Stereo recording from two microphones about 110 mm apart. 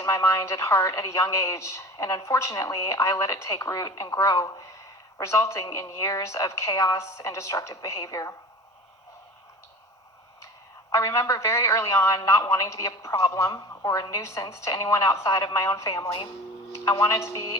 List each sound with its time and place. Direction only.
0.0 s a man's voice: 30° left (ahead or behind)
10.9 s a man's voice: 25° left (ahead or behind)